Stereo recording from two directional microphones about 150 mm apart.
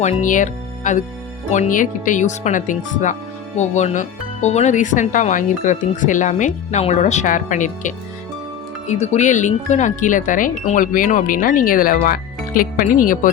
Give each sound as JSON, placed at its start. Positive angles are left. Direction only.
{"t": 0.0, "sound": "speech", "side_deg": 55}